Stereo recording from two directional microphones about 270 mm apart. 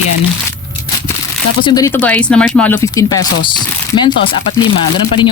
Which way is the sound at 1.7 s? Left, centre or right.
Centre.